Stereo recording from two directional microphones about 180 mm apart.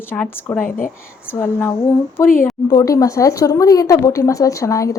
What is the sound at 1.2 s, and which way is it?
Speech, 15° left (ahead or behind).